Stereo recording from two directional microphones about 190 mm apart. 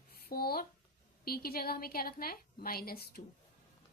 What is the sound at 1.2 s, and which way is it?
A woman's voice, 50° left (ahead or behind).